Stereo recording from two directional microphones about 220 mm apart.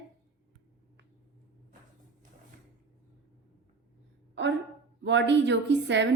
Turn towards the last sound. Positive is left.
turn(degrees=-55)  # may be behind; listen again after turning